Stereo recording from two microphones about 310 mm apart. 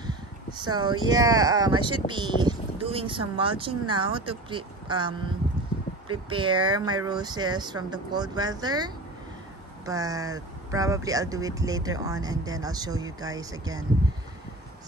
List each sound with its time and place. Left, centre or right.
0.6 s speech: centre